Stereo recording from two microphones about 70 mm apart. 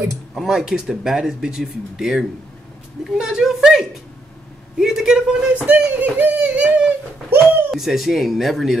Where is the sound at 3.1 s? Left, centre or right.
Centre.